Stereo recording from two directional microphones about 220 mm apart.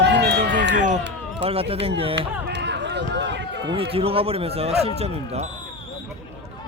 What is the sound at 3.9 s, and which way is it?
Speech, 25° right (ahead or behind).